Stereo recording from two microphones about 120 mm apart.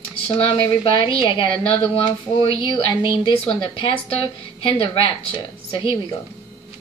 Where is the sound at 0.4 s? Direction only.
45° left (ahead or behind).